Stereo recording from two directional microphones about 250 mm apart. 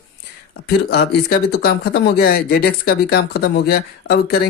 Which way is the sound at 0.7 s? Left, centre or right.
Left.